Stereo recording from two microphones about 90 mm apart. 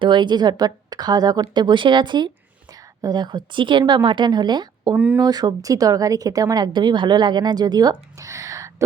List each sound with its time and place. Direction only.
0.0 s a woman's voice: 55° right (ahead or behind)
4.9 s speech: 15° right (ahead or behind)
5.2 s a woman's voice: 45° right (ahead or behind)